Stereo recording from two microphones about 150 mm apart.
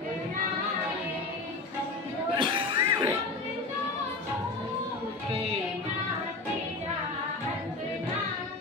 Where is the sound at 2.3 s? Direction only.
35° right (ahead or behind).